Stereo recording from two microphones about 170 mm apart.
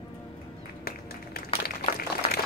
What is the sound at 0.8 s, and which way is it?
Music, 65° left (ahead or behind).